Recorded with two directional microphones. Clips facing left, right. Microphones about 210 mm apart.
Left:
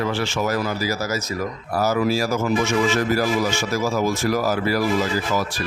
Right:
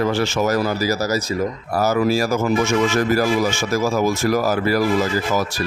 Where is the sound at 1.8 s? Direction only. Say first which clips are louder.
Right 2 dB; 50° right (ahead or behind).